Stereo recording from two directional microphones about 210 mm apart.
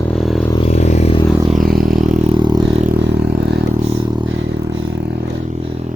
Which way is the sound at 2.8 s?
50° right (ahead or behind).